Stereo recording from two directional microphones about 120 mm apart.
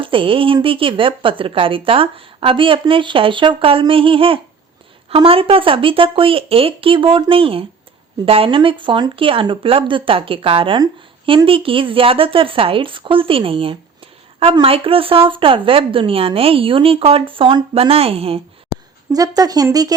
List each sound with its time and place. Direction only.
0.0 s a woman's voice: 45° right (ahead or behind)
19.1 s speech: 30° right (ahead or behind)